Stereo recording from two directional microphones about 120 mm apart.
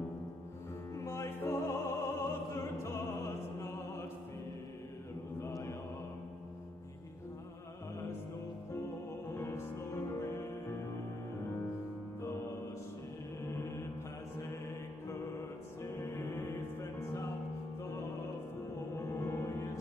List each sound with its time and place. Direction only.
0.9 s music: 20° left (ahead or behind)
5.4 s mantra: 20° left (ahead or behind)
9.3 s music: 20° left (ahead or behind)
15.8 s music: 25° left (ahead or behind)
18.9 s music: 20° left (ahead or behind)